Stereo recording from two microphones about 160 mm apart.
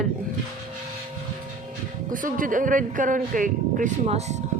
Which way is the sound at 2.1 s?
55° right (ahead or behind).